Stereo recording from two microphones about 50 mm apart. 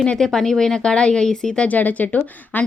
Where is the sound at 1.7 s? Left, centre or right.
Left.